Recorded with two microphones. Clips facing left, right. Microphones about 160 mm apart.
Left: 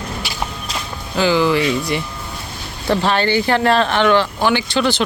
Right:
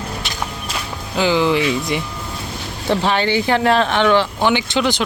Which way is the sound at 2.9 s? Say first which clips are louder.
Left 1 dB; 15° right (ahead or behind).